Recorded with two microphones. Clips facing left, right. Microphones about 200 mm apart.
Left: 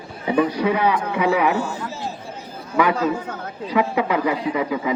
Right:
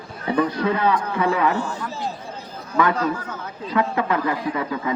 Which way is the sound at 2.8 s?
15° left (ahead or behind).